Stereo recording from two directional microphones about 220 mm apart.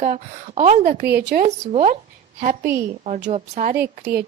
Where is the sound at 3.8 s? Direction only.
45° right (ahead or behind).